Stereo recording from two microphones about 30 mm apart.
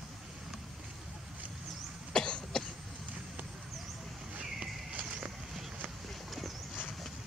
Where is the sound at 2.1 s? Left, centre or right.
Left.